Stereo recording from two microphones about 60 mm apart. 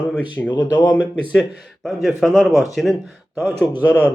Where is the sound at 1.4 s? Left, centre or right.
Centre.